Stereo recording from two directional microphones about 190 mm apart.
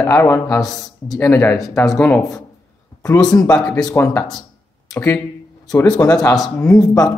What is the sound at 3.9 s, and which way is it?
Speech, 15° left (ahead or behind).